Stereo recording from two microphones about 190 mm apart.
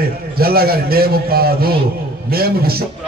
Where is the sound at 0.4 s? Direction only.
55° right (ahead or behind).